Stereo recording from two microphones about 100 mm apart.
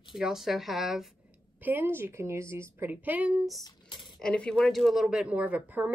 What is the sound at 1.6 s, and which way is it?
Speech, 20° right (ahead or behind).